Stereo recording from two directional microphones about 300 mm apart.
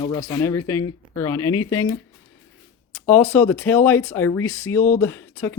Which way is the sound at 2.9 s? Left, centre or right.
Centre.